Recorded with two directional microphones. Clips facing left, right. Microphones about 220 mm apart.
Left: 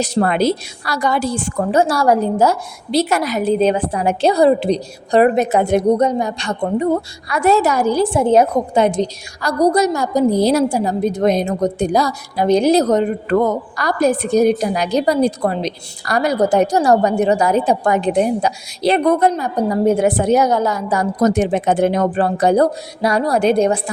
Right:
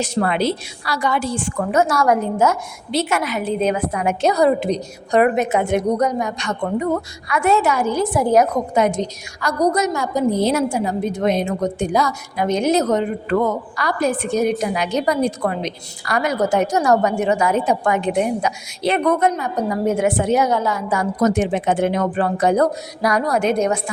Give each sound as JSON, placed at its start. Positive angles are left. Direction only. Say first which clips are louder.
{"t": 0.0, "sound": "a woman's voice", "louder": "left 3 dB", "side_deg": 40}